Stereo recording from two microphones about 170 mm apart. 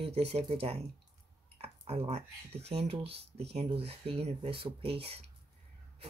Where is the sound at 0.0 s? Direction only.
35° right (ahead or behind).